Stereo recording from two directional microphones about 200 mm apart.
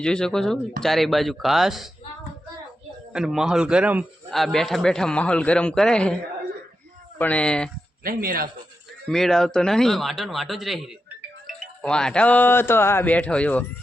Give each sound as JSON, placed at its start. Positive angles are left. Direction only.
{"t": 0.0, "sound": "a man's voice", "side_deg": 5}
{"t": 3.1, "sound": "a man's voice", "side_deg": -5}
{"t": 7.2, "sound": "a man's voice", "side_deg": 5}
{"t": 8.0, "sound": "speech", "side_deg": -45}
{"t": 9.0, "sound": "a man's voice", "side_deg": 0}